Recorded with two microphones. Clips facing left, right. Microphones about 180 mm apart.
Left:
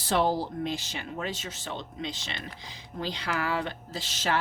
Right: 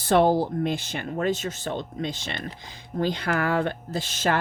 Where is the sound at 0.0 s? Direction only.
55° right (ahead or behind).